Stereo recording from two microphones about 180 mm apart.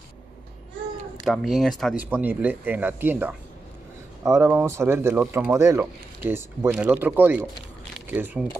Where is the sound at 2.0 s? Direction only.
10° right (ahead or behind).